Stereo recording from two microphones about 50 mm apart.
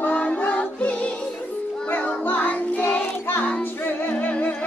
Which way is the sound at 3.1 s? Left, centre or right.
Left.